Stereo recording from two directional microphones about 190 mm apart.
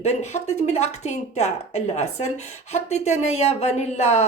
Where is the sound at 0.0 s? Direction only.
35° left (ahead or behind).